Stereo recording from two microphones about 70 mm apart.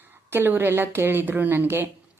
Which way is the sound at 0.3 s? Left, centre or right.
Right.